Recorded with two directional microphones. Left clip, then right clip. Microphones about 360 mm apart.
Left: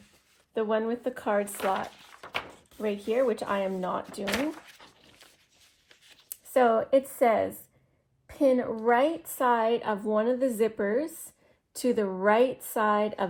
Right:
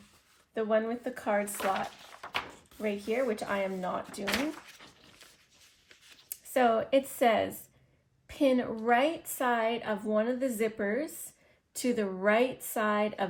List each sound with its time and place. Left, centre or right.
0.5 s a woman's voice: centre
1.5 s a sound: centre
2.9 s a woman's voice: centre
3.4 s a woman's voice: centre
4.3 s a sound: centre
6.5 s speech: centre
6.9 s a woman's voice: centre